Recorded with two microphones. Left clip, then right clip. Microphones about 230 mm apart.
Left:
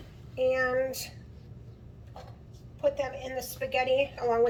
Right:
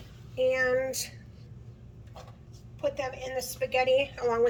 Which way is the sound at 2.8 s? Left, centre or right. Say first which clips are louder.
Left 2 dB; centre.